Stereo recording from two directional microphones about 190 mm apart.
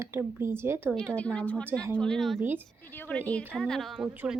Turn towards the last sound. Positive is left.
turn(degrees=-10)  # may be behind; listen again after turning